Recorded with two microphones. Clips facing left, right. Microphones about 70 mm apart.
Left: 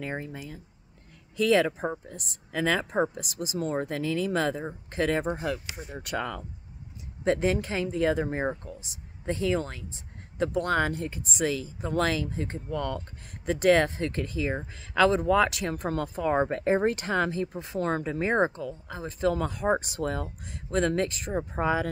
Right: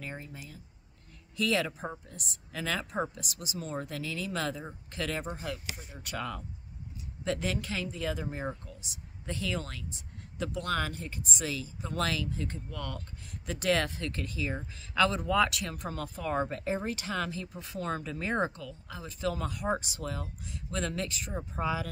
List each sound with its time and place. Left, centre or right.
0.0 s speech: left
1.5 s speech: left
5.3 s speech: left
11.9 s speech: left